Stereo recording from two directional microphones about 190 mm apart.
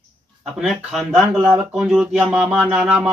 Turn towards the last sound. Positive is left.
turn(degrees=-5)  # may be behind; listen again after turning